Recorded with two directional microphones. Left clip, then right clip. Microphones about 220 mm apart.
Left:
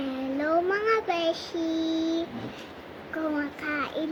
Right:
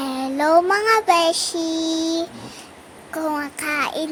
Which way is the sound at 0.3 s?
60° right (ahead or behind).